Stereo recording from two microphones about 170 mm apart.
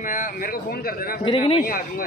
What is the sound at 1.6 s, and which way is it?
Speech, 55° left (ahead or behind).